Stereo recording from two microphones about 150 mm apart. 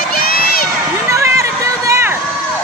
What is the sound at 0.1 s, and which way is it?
Crowd, 80° left.